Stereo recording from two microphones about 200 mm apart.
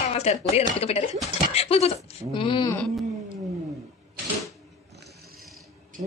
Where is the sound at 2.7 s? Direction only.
5° left (ahead or behind).